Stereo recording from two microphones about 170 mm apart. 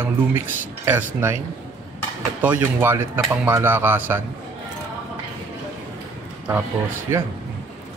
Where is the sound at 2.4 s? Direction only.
10° right (ahead or behind).